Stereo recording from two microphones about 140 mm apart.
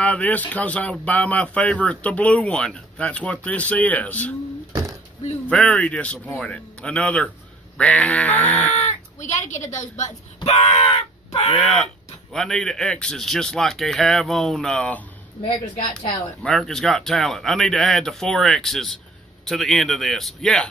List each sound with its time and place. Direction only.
0.0 s speech: 10° left (ahead or behind)
5.5 s speech: 5° left (ahead or behind)
8.7 s speech: 55° left (ahead or behind)
11.5 s speech: centre (ahead or behind)
16.4 s speech: 5° left (ahead or behind)